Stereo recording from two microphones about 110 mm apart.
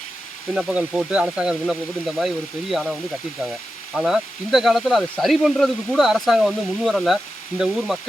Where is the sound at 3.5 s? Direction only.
5° right (ahead or behind).